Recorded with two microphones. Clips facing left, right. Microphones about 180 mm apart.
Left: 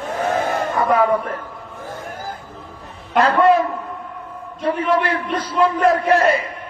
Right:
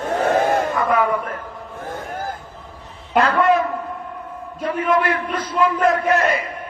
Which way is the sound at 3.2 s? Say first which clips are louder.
Left 2 dB; 35° left (ahead or behind).